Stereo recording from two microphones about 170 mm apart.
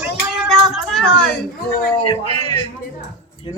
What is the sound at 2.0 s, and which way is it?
Speech, 25° left (ahead or behind).